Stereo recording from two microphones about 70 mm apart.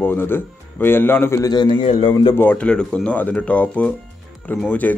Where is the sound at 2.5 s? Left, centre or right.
Centre.